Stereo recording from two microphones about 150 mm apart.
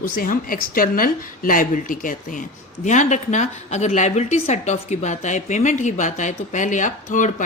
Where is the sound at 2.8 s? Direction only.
55° left (ahead or behind).